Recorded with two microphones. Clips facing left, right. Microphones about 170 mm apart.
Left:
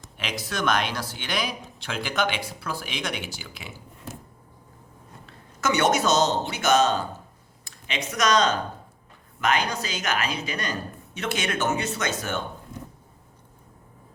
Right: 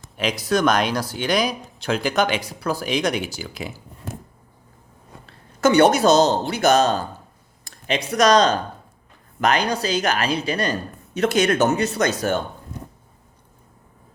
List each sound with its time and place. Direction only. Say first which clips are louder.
0.2 s speech: right 9 dB; 40° right (ahead or behind)
5.2 s speech: right 9 dB; 30° right (ahead or behind)